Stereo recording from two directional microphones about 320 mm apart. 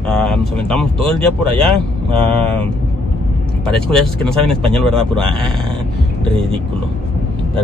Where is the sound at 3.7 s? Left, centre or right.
Centre.